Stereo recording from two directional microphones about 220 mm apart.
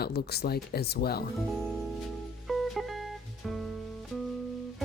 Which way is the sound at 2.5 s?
Centre (ahead or behind).